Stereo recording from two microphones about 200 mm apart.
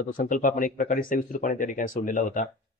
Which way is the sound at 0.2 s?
40° left (ahead or behind).